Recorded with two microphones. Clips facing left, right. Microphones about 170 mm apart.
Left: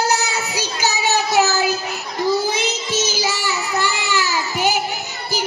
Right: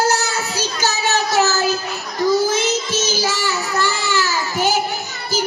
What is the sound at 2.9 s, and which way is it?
Child singing, 15° left (ahead or behind).